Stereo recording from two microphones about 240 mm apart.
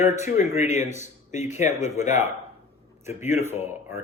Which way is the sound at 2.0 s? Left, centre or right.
Left.